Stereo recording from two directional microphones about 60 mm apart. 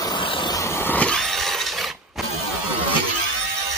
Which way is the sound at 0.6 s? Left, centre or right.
Left.